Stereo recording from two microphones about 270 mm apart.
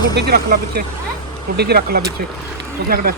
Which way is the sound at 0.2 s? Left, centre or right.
Right.